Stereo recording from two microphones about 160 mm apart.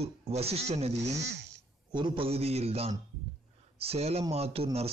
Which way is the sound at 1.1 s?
90° right.